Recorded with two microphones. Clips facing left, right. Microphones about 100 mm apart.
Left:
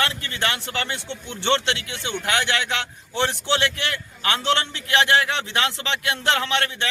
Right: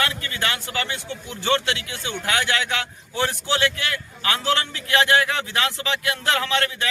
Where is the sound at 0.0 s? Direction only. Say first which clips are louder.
Even; 30° left (ahead or behind).